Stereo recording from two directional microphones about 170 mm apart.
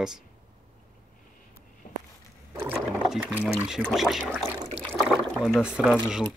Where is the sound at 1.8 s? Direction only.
55° left (ahead or behind).